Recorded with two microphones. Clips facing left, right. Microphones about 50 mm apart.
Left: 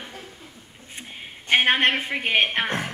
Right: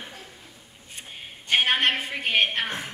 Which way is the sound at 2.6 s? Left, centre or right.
Left.